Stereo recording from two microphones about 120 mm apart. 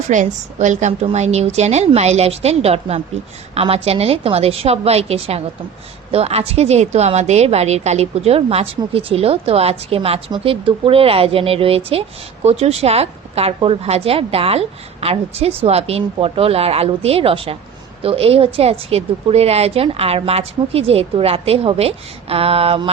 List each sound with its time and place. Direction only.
0.1 s a woman's voice: 90° right
1.1 s a woman's voice: 65° right (ahead or behind); by 22.9 s 50° right (ahead or behind)